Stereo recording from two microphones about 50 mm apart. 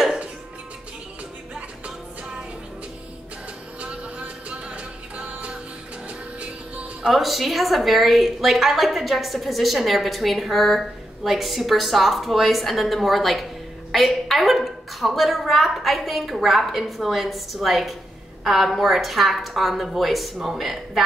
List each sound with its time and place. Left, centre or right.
3.8 s music: right
7.1 s a woman's voice: centre